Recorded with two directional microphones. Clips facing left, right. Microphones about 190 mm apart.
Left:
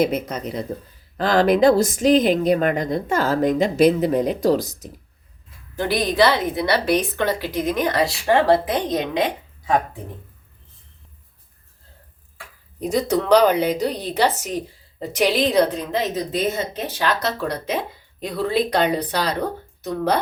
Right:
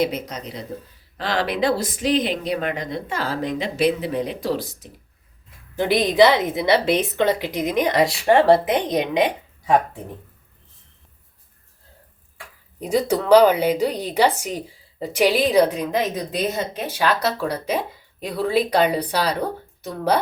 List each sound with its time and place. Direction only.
0.0 s speech: 50° left (ahead or behind)
5.7 s a woman's voice: 20° right (ahead or behind)
12.8 s speech: 10° right (ahead or behind)